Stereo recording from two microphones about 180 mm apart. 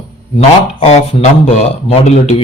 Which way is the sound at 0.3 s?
35° left (ahead or behind).